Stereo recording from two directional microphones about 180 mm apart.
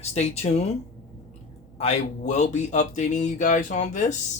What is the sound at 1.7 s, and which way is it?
Speech, 35° left (ahead or behind).